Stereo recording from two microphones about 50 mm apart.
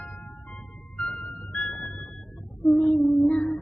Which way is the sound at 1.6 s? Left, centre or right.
Left.